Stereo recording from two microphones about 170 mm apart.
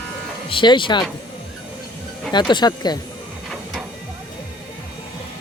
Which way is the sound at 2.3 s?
25° left (ahead or behind).